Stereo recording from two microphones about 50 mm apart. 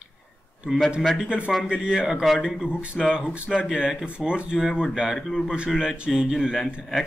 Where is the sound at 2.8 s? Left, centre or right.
Centre.